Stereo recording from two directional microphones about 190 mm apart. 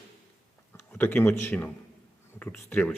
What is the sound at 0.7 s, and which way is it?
A man's voice, 10° left (ahead or behind).